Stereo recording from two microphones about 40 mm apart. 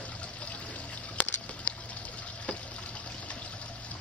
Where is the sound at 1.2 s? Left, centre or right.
Left.